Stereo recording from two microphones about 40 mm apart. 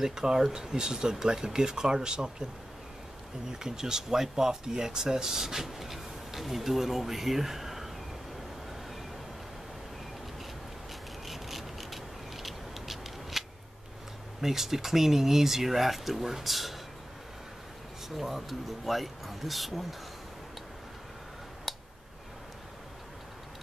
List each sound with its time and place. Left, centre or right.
0.0 s speech: centre
3.5 s speech: centre
11.2 s vehicle: centre
14.4 s speech: centre
18.1 s speech: centre
21.7 s a sound: centre